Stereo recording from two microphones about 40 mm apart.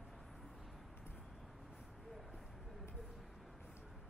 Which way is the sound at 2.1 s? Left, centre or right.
Centre.